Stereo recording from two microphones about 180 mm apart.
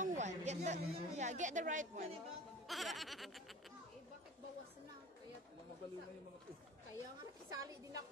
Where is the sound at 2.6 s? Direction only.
Centre (ahead or behind).